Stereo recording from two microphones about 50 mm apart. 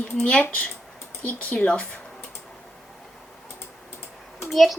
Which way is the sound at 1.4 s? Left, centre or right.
Left.